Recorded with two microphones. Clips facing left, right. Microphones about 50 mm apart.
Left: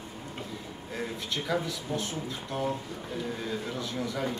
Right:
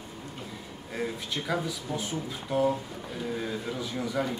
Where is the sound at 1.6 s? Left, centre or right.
Centre.